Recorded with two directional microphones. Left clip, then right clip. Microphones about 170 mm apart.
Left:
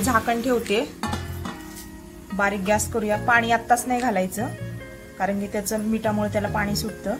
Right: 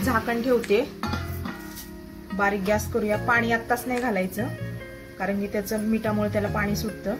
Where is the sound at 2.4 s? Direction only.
20° left (ahead or behind).